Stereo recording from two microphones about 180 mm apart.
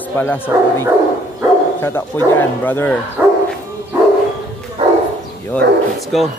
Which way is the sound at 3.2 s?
10° right (ahead or behind).